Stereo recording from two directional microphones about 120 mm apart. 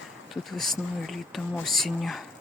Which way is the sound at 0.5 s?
Centre (ahead or behind).